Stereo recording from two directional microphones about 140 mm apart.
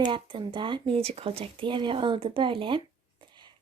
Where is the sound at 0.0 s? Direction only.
35° right (ahead or behind).